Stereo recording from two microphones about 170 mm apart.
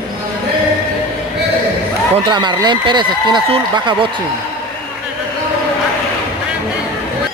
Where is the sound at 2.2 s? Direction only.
25° right (ahead or behind).